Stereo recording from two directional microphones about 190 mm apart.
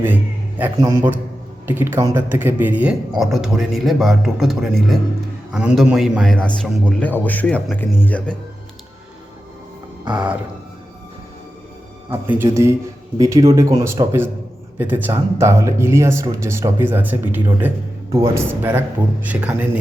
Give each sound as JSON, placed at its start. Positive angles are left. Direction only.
{"t": 0.6, "sound": "speech", "side_deg": -10}
{"t": 10.1, "sound": "speech", "side_deg": -5}
{"t": 12.1, "sound": "speech", "side_deg": -10}